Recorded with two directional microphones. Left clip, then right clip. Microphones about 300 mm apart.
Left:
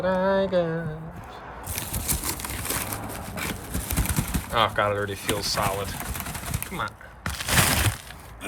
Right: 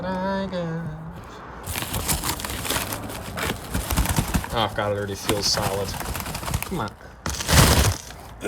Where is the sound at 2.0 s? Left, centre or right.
Centre.